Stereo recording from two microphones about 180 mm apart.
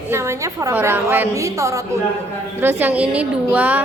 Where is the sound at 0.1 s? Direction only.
15° right (ahead or behind).